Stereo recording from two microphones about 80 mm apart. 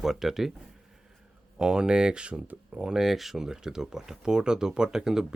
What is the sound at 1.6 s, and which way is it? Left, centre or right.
Speech, centre.